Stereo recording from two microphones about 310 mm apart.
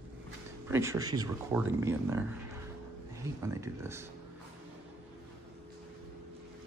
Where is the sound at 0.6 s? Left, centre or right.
Centre.